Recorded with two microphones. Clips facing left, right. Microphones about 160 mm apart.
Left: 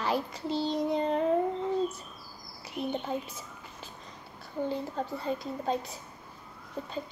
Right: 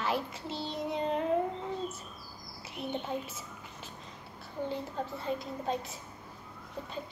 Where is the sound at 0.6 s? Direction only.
35° left (ahead or behind).